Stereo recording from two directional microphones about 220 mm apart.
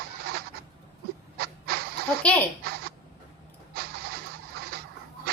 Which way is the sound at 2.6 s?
45° right (ahead or behind).